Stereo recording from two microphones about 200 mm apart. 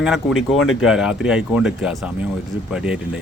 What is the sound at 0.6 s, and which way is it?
Speech, 90° left.